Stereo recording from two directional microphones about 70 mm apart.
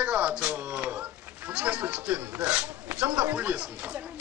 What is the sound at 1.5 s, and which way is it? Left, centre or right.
Speech, centre.